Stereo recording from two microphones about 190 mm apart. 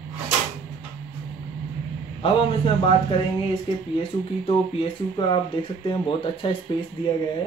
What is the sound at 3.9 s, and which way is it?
Speech, 30° left (ahead or behind).